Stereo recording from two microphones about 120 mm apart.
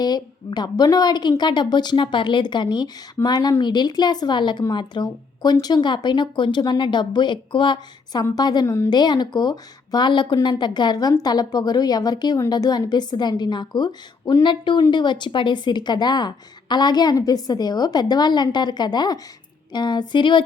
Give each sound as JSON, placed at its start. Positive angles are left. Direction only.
{"t": 0.0, "sound": "a woman's voice", "side_deg": 35}
{"t": 8.9, "sound": "a woman's voice", "side_deg": 35}